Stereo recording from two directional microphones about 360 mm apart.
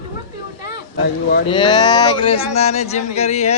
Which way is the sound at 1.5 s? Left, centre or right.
Centre.